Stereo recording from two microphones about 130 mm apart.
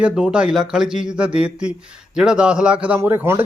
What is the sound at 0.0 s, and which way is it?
Speech, 5° right (ahead or behind).